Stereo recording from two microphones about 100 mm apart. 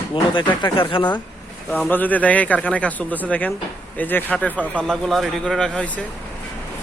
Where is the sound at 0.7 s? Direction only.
55° left (ahead or behind).